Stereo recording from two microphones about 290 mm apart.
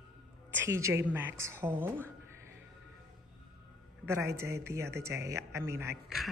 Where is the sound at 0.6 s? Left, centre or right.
Centre.